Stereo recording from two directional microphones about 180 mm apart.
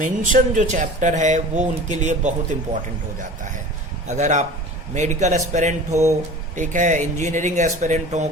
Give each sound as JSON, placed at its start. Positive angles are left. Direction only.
{"t": 0.0, "sound": "a man's voice", "side_deg": -45}
{"t": 4.1, "sound": "a man's voice", "side_deg": -40}